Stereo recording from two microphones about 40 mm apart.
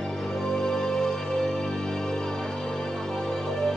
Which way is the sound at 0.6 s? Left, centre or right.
Centre.